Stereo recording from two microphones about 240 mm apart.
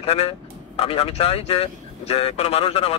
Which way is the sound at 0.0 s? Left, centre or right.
Left.